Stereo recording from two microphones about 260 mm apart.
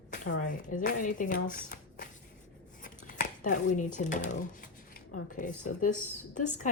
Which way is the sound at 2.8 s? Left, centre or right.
Left.